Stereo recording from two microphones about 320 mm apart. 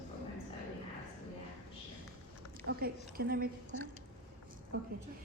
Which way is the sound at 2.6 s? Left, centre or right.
Right.